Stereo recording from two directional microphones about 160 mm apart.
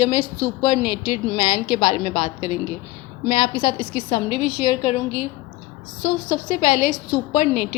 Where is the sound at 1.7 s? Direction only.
45° left (ahead or behind).